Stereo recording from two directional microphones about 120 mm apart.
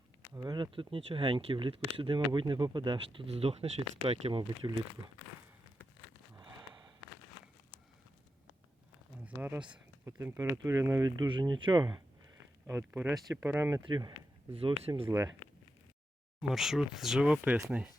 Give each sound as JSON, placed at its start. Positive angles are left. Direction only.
{"t": 0.3, "sound": "speech", "side_deg": -35}
{"t": 3.3, "sound": "speech", "side_deg": -55}
{"t": 9.2, "sound": "speech", "side_deg": -15}
{"t": 12.6, "sound": "speech", "side_deg": -20}
{"t": 13.8, "sound": "speech", "side_deg": -35}
{"t": 14.5, "sound": "speech", "side_deg": -55}
{"t": 16.4, "sound": "speech", "side_deg": -5}